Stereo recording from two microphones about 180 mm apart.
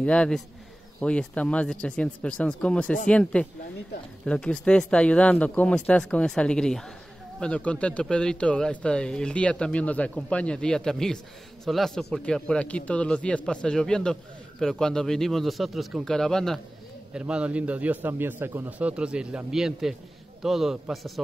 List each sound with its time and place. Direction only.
0.0 s a man's voice: 5° left (ahead or behind)